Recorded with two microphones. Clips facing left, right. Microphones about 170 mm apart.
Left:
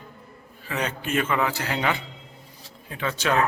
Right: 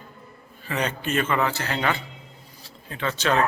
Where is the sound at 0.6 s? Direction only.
5° left (ahead or behind).